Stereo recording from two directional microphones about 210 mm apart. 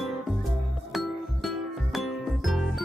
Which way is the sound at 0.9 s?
Centre (ahead or behind).